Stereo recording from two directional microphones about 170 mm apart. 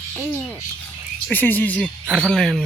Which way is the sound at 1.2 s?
10° left (ahead or behind).